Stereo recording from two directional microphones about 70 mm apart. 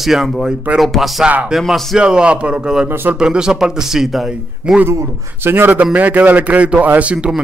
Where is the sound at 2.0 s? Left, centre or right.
Centre.